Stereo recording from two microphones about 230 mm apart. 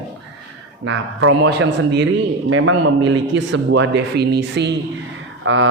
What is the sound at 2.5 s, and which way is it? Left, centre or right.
Speech, right.